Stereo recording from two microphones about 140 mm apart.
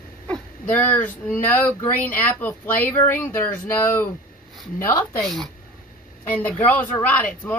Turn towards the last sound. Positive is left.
turn(degrees=15)  # may be behind; listen again after turning